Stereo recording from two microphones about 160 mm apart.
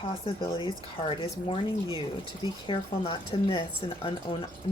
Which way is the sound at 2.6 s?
35° left (ahead or behind).